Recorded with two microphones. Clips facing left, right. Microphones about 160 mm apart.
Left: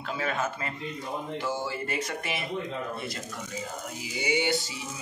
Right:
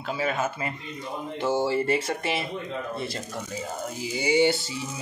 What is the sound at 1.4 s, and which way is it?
Speech, 25° right (ahead or behind).